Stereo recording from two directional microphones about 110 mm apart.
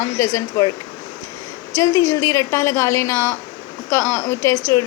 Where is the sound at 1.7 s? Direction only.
30° left (ahead or behind).